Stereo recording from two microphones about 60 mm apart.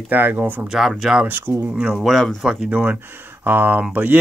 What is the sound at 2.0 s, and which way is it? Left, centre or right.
Speech, centre.